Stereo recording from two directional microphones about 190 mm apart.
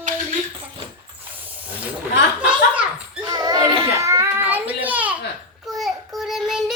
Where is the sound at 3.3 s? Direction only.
20° right (ahead or behind).